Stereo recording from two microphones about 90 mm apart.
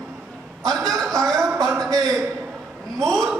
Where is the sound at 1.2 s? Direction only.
5° left (ahead or behind).